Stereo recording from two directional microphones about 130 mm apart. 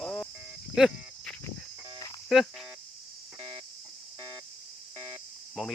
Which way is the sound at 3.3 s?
35° right (ahead or behind).